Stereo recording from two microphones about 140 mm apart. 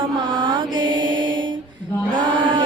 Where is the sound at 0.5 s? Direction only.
35° right (ahead or behind).